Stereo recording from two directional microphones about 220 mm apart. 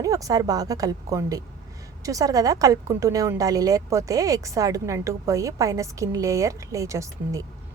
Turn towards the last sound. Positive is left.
turn(degrees=-15)  # may be behind; listen again after turning